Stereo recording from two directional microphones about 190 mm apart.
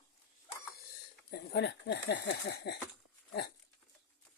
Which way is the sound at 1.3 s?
60° left (ahead or behind).